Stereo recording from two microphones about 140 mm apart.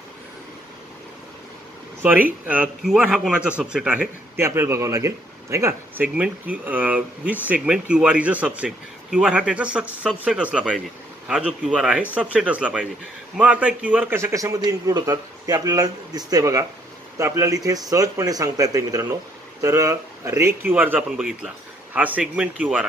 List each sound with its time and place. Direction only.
2.0 s a man's voice: 15° right (ahead or behind)